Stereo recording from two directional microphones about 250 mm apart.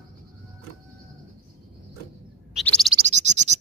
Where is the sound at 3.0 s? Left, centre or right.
Right.